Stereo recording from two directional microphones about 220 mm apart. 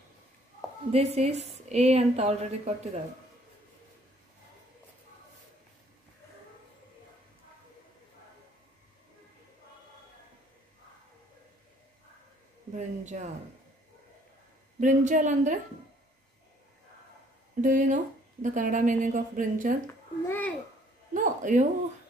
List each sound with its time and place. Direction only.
0.9 s a woman's voice: 30° right (ahead or behind)
12.7 s speech: 35° right (ahead or behind)
14.8 s speech: 35° right (ahead or behind)
17.6 s speech: 35° right (ahead or behind)
19.9 s babbling: 10° left (ahead or behind)
21.1 s a sound: 35° right (ahead or behind)